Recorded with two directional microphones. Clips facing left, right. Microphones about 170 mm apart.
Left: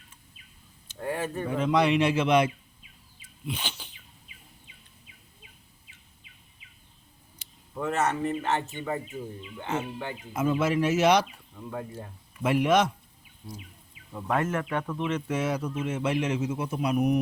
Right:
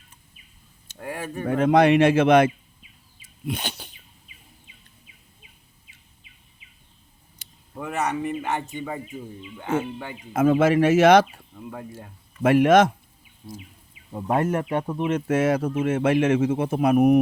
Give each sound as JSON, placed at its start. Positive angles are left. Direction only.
{"t": 1.0, "sound": "speech", "side_deg": -10}
{"t": 1.5, "sound": "speech", "side_deg": -55}
{"t": 3.4, "sound": "a sound", "side_deg": -45}
{"t": 7.8, "sound": "speech", "side_deg": -10}
{"t": 10.3, "sound": "speech", "side_deg": -80}
{"t": 12.4, "sound": "speech", "side_deg": -55}
{"t": 14.1, "sound": "speech", "side_deg": -25}
{"t": 14.6, "sound": "speech", "side_deg": -25}
{"t": 15.0, "sound": "speech", "side_deg": -45}
{"t": 15.4, "sound": "speech", "side_deg": -90}
{"t": 15.6, "sound": "speech", "side_deg": -50}
{"t": 16.0, "sound": "a man's voice", "side_deg": -85}
{"t": 16.2, "sound": "speech", "side_deg": -50}